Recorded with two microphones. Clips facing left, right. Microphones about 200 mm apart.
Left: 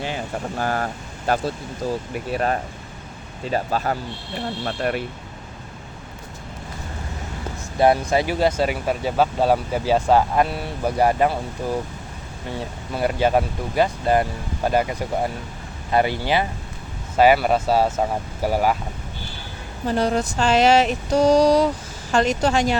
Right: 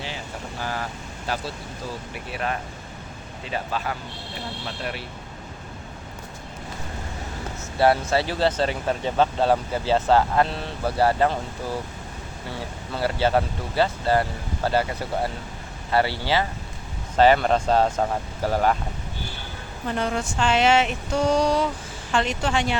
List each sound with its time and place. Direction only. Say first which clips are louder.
0.6 s speech: left 5 dB; 50° left (ahead or behind)
2.1 s a sound: left 4 dB; 40° left (ahead or behind)
4.6 s speech: left 9 dB; 50° left (ahead or behind)
7.8 s speech: left 2 dB; 15° left (ahead or behind)
12.5 s speech: left 4 dB; 15° left (ahead or behind)
19.9 s a sound: left 5 dB; 35° left (ahead or behind)